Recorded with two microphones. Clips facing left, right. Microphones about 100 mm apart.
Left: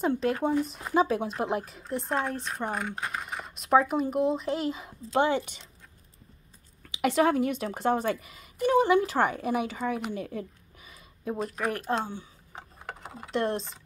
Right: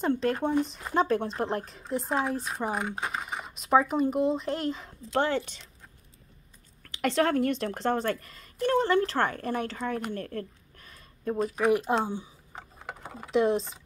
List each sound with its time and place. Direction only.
0.0 s speech: 5° left (ahead or behind)
6.8 s speech: 10° left (ahead or behind)
12.0 s speech: 15° right (ahead or behind)
12.5 s a sound: 10° left (ahead or behind)
13.3 s speech: centre (ahead or behind)